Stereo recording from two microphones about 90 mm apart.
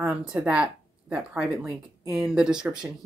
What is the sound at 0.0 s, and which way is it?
Speech, 15° right (ahead or behind).